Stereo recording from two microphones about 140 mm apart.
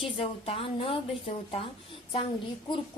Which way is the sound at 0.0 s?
40° left (ahead or behind).